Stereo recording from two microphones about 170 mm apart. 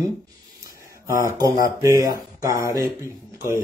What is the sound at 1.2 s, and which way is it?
Speech, 20° right (ahead or behind).